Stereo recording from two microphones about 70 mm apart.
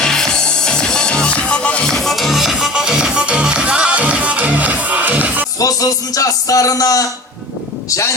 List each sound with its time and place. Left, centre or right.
0.0 s music: centre; by 5.5 s right
5.5 s a man's voice: left